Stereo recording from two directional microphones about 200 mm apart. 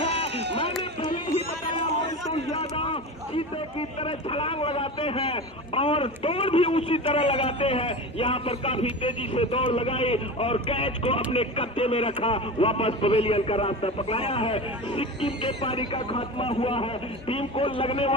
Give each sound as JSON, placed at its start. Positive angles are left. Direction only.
{"t": 0.3, "sound": "run", "side_deg": -60}
{"t": 2.5, "sound": "a man's voice", "side_deg": 30}